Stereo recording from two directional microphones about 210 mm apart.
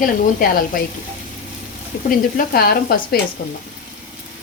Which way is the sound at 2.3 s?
45° left (ahead or behind).